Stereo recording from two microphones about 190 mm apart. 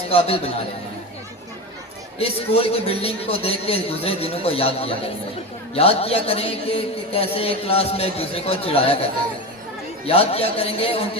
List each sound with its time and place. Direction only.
0.1 s a man's voice: 30° left (ahead or behind)
2.1 s a man's voice: 30° left (ahead or behind)
10.1 s a man's voice: 30° left (ahead or behind)